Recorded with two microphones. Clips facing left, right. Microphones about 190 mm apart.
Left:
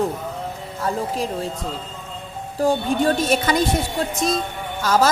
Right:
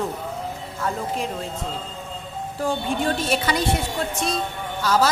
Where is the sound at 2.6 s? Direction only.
40° left (ahead or behind).